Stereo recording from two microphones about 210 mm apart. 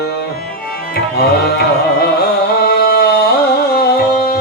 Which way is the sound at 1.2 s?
50° left (ahead or behind).